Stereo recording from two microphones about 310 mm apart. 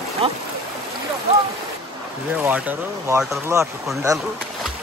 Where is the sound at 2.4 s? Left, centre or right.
Centre.